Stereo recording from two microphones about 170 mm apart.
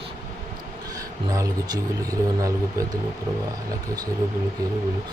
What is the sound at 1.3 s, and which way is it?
Speech, 20° right (ahead or behind).